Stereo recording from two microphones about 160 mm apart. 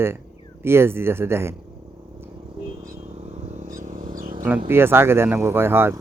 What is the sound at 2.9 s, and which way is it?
Vehicle, 40° right (ahead or behind).